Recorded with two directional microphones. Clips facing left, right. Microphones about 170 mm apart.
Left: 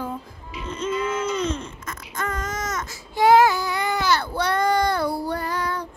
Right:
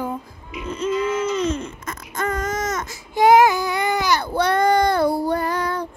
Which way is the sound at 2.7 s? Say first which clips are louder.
Right 4 dB; 20° right (ahead or behind).